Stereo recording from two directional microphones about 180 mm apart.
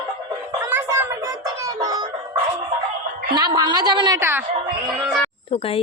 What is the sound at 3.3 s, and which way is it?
Speech, 25° right (ahead or behind).